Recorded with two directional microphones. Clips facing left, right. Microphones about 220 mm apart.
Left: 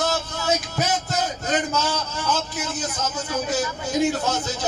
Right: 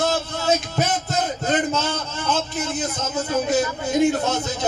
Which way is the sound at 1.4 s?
55° right (ahead or behind).